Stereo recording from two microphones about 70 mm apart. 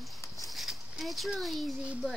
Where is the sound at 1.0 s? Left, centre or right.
Centre.